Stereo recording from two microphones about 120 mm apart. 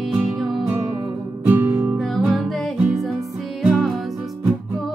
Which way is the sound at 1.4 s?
15° right (ahead or behind).